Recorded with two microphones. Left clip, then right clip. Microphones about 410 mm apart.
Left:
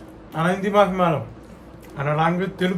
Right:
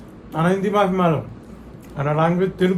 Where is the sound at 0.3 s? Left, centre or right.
Centre.